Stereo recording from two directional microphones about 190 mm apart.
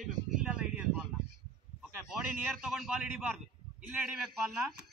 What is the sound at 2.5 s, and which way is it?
Speech, centre (ahead or behind).